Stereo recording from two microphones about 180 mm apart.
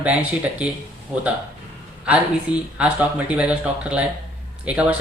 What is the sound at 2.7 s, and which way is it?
Speech, 5° right (ahead or behind).